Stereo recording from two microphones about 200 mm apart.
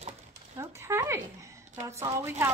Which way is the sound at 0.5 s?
15° right (ahead or behind).